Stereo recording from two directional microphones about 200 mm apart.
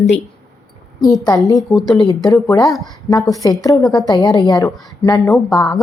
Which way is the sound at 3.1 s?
15° left (ahead or behind).